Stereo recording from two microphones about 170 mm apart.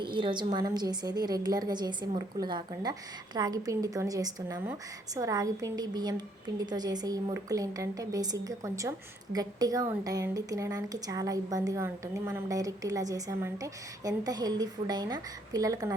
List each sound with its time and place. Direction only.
0.0 s a woman's voice: 30° right (ahead or behind)